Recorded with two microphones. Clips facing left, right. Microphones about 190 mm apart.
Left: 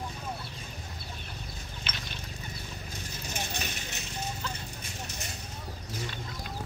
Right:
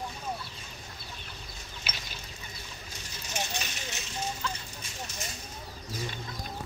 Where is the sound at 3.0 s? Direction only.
55° left (ahead or behind).